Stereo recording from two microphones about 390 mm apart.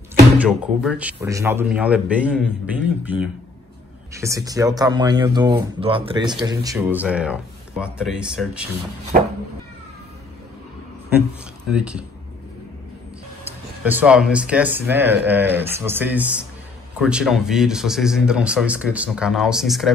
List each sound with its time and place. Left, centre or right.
0.4 s speech: centre
9.1 s cat: right
11.7 s speech: centre
13.5 s speech: centre